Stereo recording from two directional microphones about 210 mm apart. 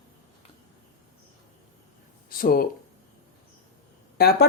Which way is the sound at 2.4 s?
45° left (ahead or behind).